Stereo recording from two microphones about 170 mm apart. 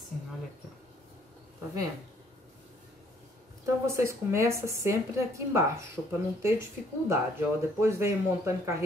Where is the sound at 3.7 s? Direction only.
15° right (ahead or behind).